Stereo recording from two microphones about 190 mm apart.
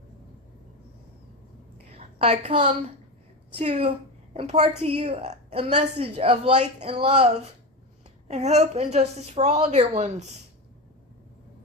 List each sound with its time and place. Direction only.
1.9 s a woman's voice: 30° right (ahead or behind)
8.3 s a woman's voice: 35° right (ahead or behind)